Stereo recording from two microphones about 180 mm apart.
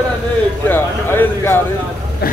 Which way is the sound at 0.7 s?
10° left (ahead or behind).